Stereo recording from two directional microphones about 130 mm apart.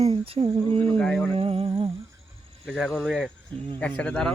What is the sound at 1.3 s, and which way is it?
Humming, 50° right (ahead or behind).